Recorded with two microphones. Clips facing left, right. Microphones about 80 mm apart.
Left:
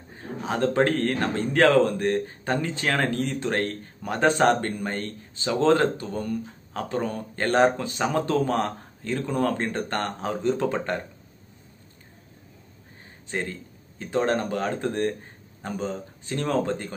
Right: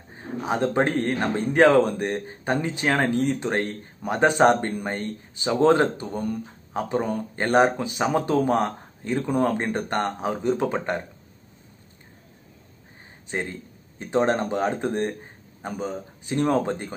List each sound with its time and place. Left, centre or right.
0.1 s speech: centre
13.3 s speech: right